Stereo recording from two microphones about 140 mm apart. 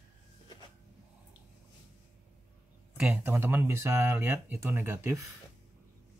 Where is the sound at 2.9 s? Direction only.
10° right (ahead or behind).